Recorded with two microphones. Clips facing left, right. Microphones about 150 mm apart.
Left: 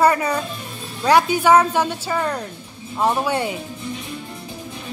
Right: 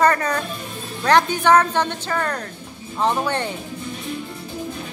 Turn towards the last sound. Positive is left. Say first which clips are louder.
# left 1 dB
turn(degrees=10)  # may be behind; listen again after turning